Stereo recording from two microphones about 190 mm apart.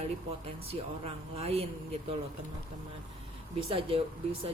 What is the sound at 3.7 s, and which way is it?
Speech, 30° right (ahead or behind).